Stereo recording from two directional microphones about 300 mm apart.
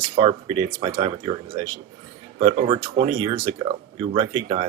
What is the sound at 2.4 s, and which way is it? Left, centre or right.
Speech, centre.